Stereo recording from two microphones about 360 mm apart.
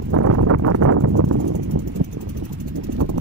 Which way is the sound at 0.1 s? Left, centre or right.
Right.